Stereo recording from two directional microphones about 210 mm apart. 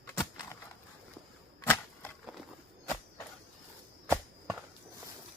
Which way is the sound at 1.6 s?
10° left (ahead or behind).